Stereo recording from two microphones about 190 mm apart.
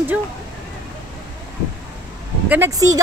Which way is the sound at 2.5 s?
15° right (ahead or behind).